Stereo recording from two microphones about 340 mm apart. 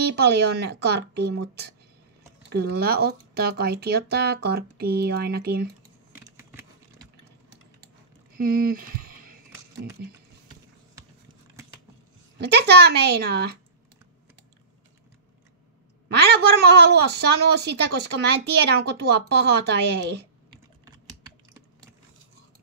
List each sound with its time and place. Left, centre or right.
0.1 s speech: right
2.5 s speech: right
6.3 s a sound: centre
8.4 s speech: right
12.4 s speech: right
16.1 s speech: right